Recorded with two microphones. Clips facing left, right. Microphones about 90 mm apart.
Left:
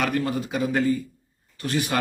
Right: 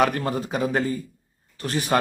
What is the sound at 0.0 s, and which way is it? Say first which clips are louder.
Speech: right 3 dB; 40° right (ahead or behind).